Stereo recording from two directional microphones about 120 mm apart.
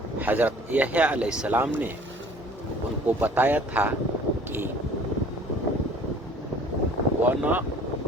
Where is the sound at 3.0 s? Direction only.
15° right (ahead or behind).